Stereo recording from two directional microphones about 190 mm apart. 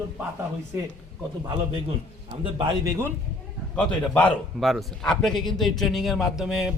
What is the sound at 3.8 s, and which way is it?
A man's voice, 5° left (ahead or behind).